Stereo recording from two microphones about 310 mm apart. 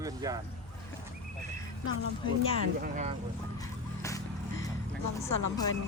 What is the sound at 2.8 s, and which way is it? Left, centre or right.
Speech, right.